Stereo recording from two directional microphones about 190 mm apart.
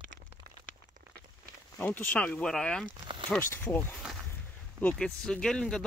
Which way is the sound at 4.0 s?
Centre (ahead or behind).